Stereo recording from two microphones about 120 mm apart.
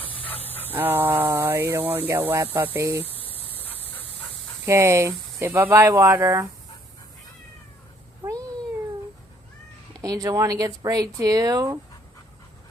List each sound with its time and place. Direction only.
0.0 s dog: 50° left (ahead or behind)
0.4 s dog: 15° left (ahead or behind)
0.7 s a sound: 15° right (ahead or behind)
1.3 s speech: 20° right (ahead or behind)
3.2 s fowl: 50° left (ahead or behind)
4.0 s dog: 55° left (ahead or behind)
4.6 s speech: 25° right (ahead or behind)
8.2 s cat: 30° right (ahead or behind)
10.0 s speech: 30° right (ahead or behind)